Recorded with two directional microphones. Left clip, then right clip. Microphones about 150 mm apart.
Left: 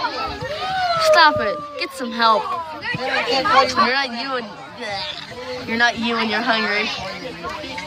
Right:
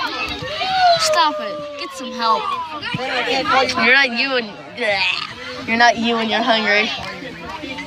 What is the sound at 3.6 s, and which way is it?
Speech, 5° left (ahead or behind).